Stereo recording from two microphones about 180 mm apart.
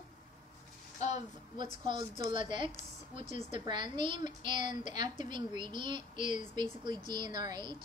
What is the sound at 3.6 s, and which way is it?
A woman's voice, 25° right (ahead or behind).